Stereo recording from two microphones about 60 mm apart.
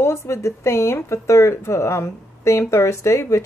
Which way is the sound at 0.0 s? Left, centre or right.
Left.